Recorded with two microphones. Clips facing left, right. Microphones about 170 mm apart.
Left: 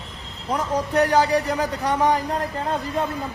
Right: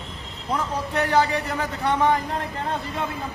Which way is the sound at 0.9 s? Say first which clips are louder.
Left 3 dB; 40° left (ahead or behind).